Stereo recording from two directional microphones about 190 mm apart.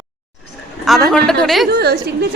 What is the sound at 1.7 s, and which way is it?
Speech, 55° right (ahead or behind).